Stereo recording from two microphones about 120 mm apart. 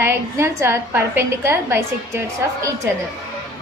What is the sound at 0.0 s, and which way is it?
A woman's voice, 20° right (ahead or behind).